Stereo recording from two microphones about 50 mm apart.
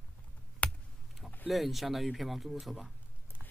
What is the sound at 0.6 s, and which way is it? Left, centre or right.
Computer keyboard, left.